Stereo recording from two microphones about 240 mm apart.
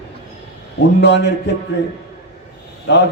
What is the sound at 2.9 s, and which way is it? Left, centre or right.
Speech, left.